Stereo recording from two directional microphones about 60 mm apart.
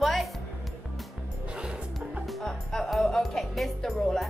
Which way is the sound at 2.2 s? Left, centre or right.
Centre.